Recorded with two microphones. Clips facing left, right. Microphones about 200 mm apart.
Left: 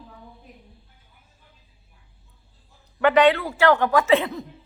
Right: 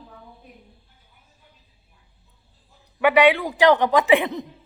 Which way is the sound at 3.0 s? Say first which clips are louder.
Even; 10° right (ahead or behind).